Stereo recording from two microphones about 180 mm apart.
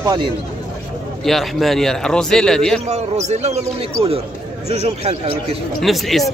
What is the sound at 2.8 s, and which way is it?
Speech, 40° right (ahead or behind).